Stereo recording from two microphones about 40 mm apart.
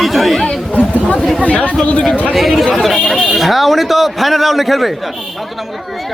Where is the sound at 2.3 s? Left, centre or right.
Centre.